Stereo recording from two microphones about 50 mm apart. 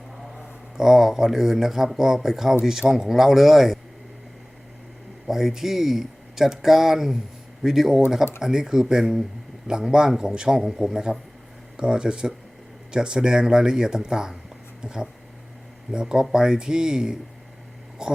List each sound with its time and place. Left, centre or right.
0.3 s speech: centre
5.3 s speech: centre